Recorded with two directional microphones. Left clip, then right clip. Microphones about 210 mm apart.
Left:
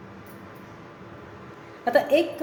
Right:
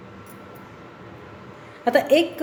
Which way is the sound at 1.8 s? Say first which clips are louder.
Right 3 dB; 30° right (ahead or behind).